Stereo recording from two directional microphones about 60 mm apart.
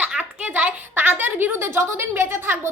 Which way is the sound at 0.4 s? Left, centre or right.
Right.